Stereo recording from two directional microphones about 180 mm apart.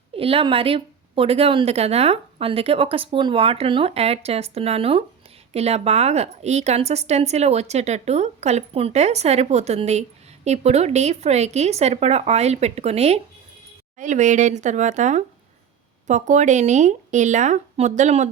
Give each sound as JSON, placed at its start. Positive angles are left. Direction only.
{"t": 0.2, "sound": "speech", "side_deg": -30}